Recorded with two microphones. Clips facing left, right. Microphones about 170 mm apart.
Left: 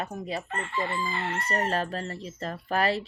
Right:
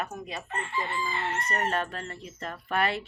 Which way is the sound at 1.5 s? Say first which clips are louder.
Left 3 dB; 35° left (ahead or behind).